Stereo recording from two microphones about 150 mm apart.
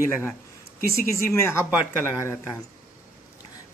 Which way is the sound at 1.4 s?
20° left (ahead or behind).